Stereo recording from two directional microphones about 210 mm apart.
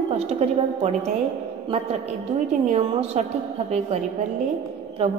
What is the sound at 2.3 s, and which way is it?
Speech, 30° right (ahead or behind).